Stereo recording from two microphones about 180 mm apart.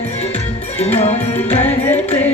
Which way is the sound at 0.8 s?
35° left (ahead or behind).